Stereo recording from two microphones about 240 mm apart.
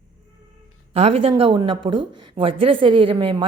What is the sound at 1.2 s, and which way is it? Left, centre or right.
A woman's voice, right.